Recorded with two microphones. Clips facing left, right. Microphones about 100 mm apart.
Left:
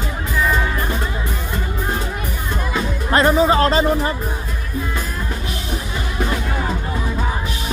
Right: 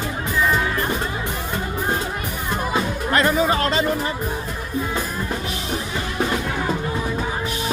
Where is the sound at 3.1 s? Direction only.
30° left (ahead or behind).